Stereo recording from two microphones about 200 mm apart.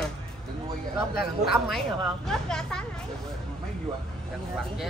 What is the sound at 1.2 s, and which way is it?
Speech, centre (ahead or behind).